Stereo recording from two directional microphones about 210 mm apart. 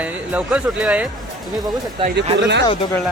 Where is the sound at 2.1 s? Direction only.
55° right (ahead or behind).